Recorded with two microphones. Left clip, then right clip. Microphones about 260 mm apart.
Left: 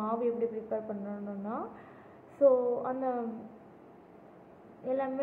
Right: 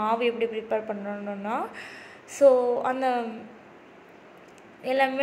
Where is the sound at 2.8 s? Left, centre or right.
Centre.